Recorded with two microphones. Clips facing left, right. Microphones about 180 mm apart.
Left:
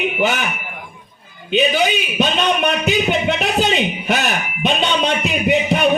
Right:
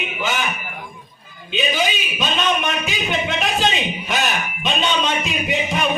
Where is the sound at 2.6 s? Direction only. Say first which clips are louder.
Left 6 dB; 65° left (ahead or behind).